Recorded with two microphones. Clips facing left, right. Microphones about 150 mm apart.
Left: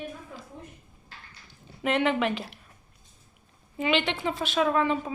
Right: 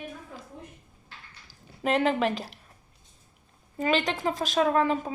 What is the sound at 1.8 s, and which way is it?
Speech, 40° right (ahead or behind).